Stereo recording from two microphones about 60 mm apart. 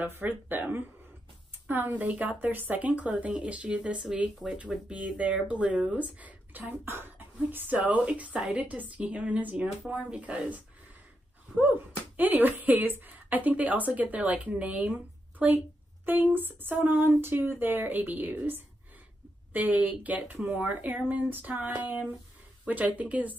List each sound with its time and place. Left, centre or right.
0.0 s a woman's voice: right
7.7 s speech: right
8.5 s speech: right
12.2 s a woman's voice: right